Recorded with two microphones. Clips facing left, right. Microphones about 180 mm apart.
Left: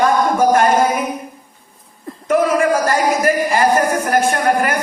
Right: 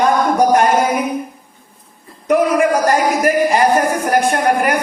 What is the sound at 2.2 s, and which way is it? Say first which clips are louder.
Speech: right 1 dB; 15° right (ahead or behind).